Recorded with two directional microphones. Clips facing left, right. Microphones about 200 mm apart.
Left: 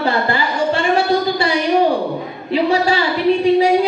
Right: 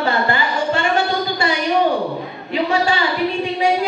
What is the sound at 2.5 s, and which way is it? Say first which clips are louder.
Speech: left 3 dB; 35° left (ahead or behind).